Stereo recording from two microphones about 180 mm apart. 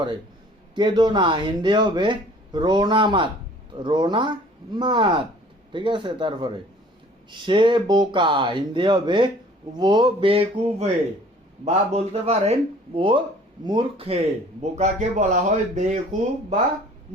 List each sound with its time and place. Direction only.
0.8 s a man's voice: 25° right (ahead or behind); by 16.0 s 45° right (ahead or behind)